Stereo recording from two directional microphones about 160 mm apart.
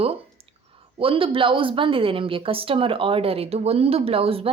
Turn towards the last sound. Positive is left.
turn(degrees=-35)  # may be behind; listen again after turning